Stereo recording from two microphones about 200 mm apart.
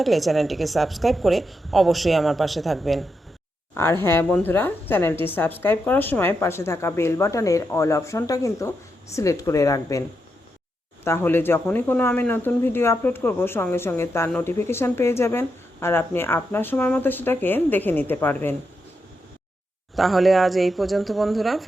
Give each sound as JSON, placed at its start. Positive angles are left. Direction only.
{"t": 0.0, "sound": "a woman's voice", "side_deg": 0}
{"t": 3.8, "sound": "speech", "side_deg": 10}
{"t": 11.0, "sound": "speech", "side_deg": 10}
{"t": 20.0, "sound": "a woman's voice", "side_deg": 0}